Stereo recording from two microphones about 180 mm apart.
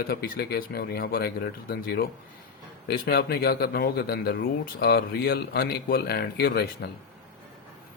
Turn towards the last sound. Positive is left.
turn(degrees=60)  # may be behind; listen again after turning